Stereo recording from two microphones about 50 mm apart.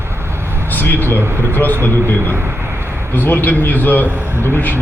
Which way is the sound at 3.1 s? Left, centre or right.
Left.